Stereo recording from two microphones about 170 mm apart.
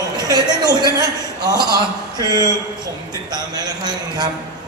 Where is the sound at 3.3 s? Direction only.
25° right (ahead or behind).